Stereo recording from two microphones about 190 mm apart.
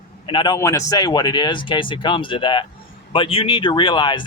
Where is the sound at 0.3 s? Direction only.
25° left (ahead or behind).